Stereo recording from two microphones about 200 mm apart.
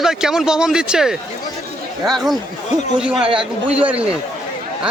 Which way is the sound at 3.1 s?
25° right (ahead or behind).